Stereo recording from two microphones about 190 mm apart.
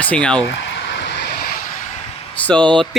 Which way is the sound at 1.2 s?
55° left (ahead or behind).